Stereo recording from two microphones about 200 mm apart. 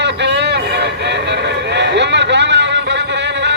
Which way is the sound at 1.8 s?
60° right (ahead or behind).